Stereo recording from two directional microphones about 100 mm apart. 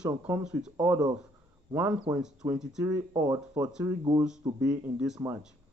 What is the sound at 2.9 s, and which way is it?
Speech, 35° right (ahead or behind).